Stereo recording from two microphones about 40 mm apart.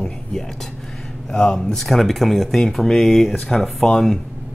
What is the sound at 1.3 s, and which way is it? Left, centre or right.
Speech, centre.